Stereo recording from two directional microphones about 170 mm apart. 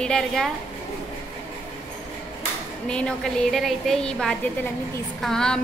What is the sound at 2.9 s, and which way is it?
A woman's voice, 5° left (ahead or behind).